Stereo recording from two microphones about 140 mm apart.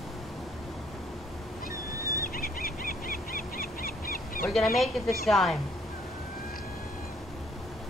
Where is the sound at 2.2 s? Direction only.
90° left.